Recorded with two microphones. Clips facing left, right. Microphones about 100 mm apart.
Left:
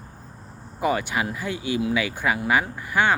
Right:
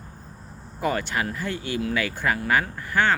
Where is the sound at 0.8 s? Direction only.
10° left (ahead or behind).